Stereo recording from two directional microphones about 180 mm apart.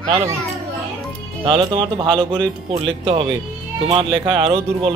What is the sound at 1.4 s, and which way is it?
Speech, 30° right (ahead or behind).